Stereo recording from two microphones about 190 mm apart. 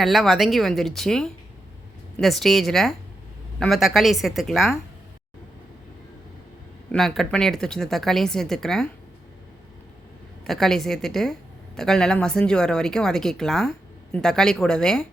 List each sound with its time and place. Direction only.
0.0 s speech: centre (ahead or behind)
6.9 s speech: centre (ahead or behind)
10.4 s speech: centre (ahead or behind)